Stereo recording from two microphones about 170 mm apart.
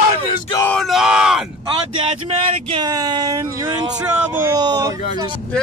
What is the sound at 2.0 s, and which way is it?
Speech, 35° right (ahead or behind).